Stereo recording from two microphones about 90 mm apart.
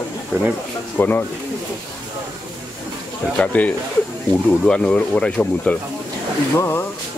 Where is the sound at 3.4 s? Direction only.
15° left (ahead or behind).